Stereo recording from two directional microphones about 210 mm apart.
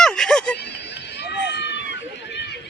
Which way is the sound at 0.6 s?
55° left (ahead or behind).